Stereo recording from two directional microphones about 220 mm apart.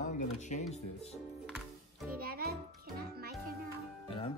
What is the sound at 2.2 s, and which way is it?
Music, 45° right (ahead or behind).